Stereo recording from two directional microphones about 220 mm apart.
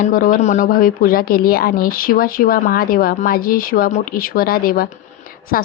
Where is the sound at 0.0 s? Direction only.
40° left (ahead or behind).